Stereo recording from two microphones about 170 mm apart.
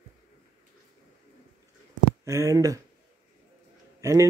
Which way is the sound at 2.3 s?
20° right (ahead or behind).